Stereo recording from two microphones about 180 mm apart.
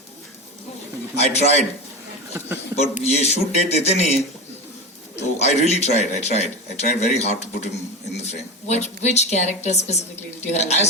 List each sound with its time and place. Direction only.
1.1 s a man's voice: 35° left (ahead or behind)
2.3 s a sound: 10° right (ahead or behind)
2.7 s a man's voice: 35° left (ahead or behind)